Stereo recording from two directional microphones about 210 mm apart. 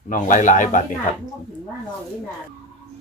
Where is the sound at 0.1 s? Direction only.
40° left (ahead or behind).